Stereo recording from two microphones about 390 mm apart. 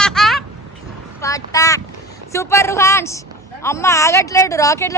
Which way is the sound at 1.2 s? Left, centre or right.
Centre.